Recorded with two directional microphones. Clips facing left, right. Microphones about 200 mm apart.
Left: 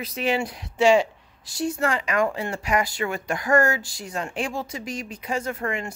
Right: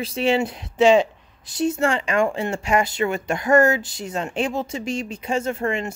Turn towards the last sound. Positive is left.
turn(degrees=-25)  # may be behind; listen again after turning